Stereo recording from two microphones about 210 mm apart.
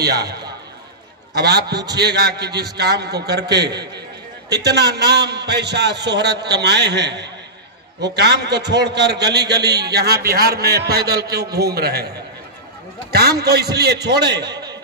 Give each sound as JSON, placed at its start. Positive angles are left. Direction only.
{"t": 0.0, "sound": "a man's voice", "side_deg": -50}
{"t": 8.6, "sound": "a man's voice", "side_deg": -55}
{"t": 13.1, "sound": "a man's voice", "side_deg": -50}
{"t": 14.5, "sound": "a sound", "side_deg": -20}